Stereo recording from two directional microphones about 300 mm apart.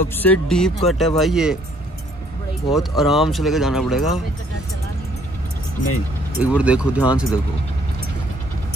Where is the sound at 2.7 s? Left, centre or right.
Centre.